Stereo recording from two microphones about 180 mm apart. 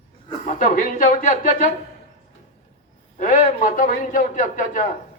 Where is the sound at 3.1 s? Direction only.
45° left (ahead or behind).